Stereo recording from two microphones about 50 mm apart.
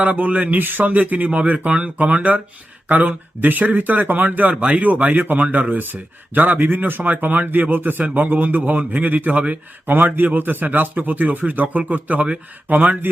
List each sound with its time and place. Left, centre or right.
0.0 s speech: right